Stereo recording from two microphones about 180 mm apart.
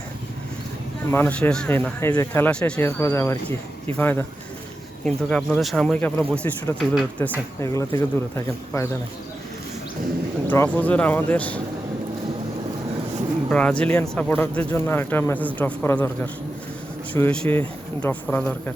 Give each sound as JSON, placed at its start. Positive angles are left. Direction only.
{"t": 1.1, "sound": "speech", "side_deg": 10}
{"t": 7.6, "sound": "speech", "side_deg": 15}
{"t": 10.4, "sound": "speech", "side_deg": 10}
{"t": 13.5, "sound": "speech", "side_deg": 5}